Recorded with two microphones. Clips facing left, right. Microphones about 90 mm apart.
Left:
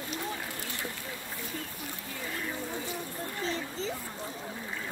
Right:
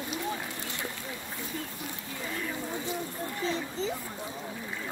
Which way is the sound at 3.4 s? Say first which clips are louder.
Right 3 dB; 20° right (ahead or behind).